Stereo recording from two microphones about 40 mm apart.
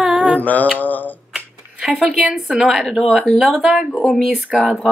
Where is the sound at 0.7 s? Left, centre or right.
Left.